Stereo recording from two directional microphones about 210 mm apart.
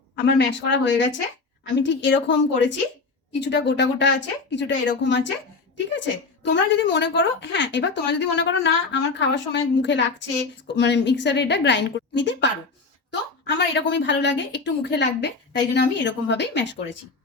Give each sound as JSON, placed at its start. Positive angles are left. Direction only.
{"t": 0.3, "sound": "speech", "side_deg": 60}
{"t": 6.4, "sound": "speech", "side_deg": 60}